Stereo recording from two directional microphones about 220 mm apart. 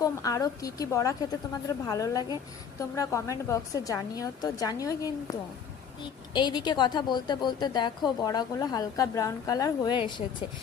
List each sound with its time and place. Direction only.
0.0 s a woman's voice: 15° left (ahead or behind)